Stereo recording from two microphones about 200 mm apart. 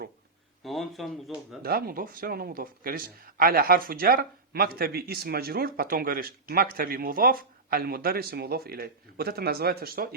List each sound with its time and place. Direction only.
0.6 s speech: centre (ahead or behind)
1.6 s speech: 45° right (ahead or behind)